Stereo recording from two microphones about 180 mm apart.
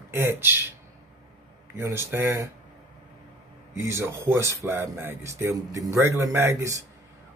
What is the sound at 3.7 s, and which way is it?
Speech, 15° right (ahead or behind).